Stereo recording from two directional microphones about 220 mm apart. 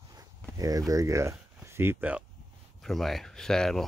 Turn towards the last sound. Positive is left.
turn(degrees=0)  # may be behind; listen again after turning